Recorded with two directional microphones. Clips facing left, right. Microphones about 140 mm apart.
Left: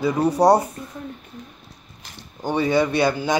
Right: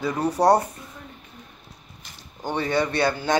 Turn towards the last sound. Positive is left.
turn(degrees=10)  # may be behind; listen again after turning